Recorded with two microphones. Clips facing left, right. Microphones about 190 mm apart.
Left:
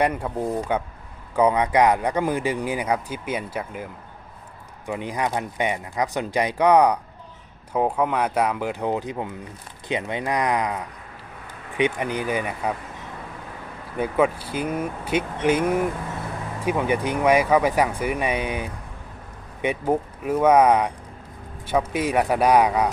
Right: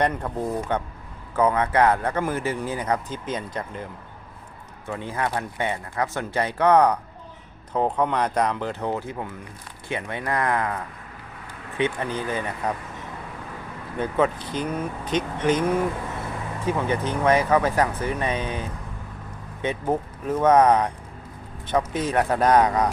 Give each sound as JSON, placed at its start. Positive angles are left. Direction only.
{"t": 0.0, "sound": "speech", "side_deg": 10}
{"t": 4.9, "sound": "speech", "side_deg": 15}
{"t": 11.8, "sound": "speech", "side_deg": 15}
{"t": 14.0, "sound": "speech", "side_deg": 10}